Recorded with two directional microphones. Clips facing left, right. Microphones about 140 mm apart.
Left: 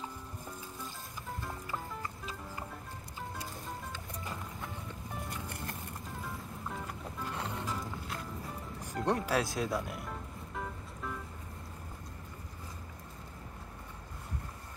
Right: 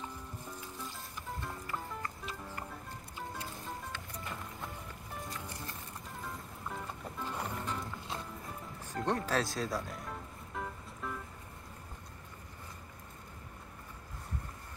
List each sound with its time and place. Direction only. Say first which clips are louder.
1.7 s music: even; 15° left (ahead or behind)
6.2 s music: even; centre (ahead or behind)
7.6 s music: left 1 dB; 5° left (ahead or behind)
8.8 s speech: left 2 dB; 10° left (ahead or behind)
10.5 s music: even; centre (ahead or behind)